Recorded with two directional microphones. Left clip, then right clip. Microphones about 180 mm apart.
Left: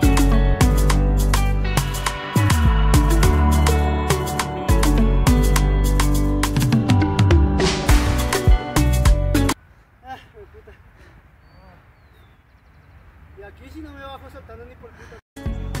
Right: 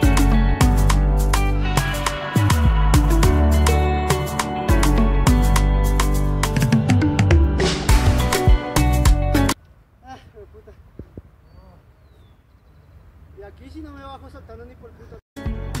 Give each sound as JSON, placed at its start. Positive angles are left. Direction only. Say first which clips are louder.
{"t": 0.1, "sound": "music", "louder": "even", "side_deg": 0}
{"t": 13.4, "sound": "vehicle", "louder": "even", "side_deg": -20}
{"t": 15.0, "sound": "music", "louder": "right 3 dB", "side_deg": 0}